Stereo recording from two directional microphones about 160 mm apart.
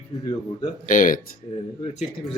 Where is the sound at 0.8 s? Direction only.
55° left (ahead or behind).